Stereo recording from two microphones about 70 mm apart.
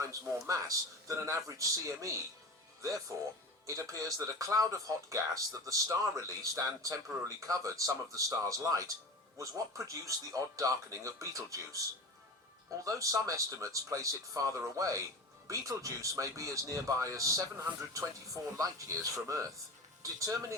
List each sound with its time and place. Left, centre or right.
0.0 s speech: right
3.7 s speech: right
12.8 s speech: right
18.5 s speech: right